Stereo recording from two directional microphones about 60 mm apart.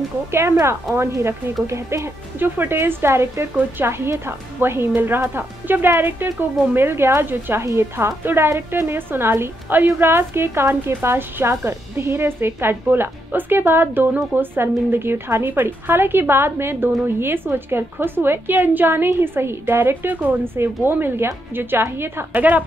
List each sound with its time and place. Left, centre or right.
0.3 s a woman's voice: right
2.4 s a woman's voice: right
22.3 s a woman's voice: right